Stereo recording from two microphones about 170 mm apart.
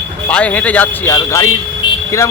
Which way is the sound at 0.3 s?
10° left (ahead or behind).